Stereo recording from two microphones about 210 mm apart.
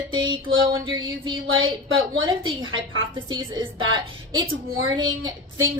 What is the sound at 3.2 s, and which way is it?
Speech, 20° right (ahead or behind).